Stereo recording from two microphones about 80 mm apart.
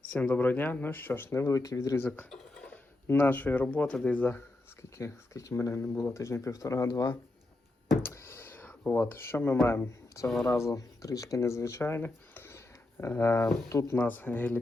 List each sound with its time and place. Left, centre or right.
0.1 s speech: centre; by 2.0 s left
2.0 s speech: left
2.3 s a sound: centre
3.1 s speech: left
4.3 s speech: left
8.0 s a sound: left
9.0 s speech: left